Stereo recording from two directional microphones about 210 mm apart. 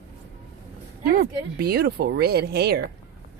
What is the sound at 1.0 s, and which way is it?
Speech, 45° right (ahead or behind).